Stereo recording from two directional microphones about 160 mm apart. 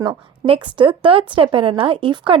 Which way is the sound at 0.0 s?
30° right (ahead or behind).